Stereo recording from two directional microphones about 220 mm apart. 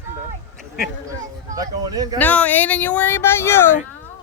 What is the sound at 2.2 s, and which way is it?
Speech, 5° left (ahead or behind).